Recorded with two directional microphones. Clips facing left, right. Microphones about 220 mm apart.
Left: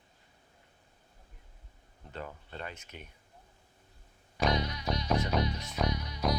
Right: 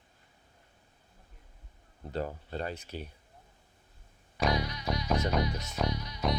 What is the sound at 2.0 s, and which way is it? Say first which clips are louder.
Speech: right 8 dB; 35° right (ahead or behind).